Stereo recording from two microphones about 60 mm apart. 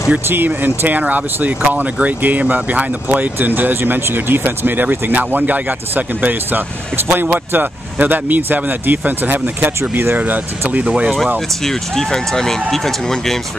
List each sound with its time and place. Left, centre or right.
0.3 s speech: right
11.3 s speech: centre